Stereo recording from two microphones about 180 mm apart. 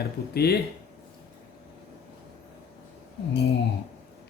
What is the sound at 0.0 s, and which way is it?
Speech, 60° left (ahead or behind).